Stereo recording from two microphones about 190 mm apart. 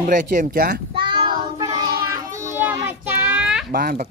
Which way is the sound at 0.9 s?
25° right (ahead or behind).